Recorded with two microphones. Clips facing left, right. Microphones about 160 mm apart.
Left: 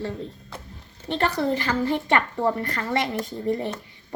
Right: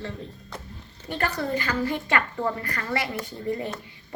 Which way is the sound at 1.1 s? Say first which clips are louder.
Left 4 dB; 25° left (ahead or behind).